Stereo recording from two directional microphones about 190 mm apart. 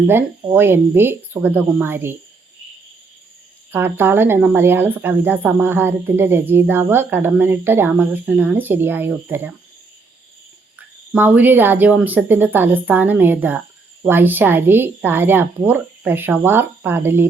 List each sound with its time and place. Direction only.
0.1 s speech: 10° right (ahead or behind)
3.7 s speech: 10° right (ahead or behind)
10.8 s speech: 10° right (ahead or behind)